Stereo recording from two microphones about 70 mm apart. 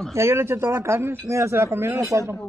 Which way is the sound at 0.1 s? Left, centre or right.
Right.